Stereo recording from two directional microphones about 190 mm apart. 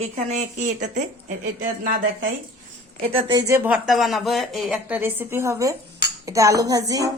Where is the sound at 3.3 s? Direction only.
15° right (ahead or behind).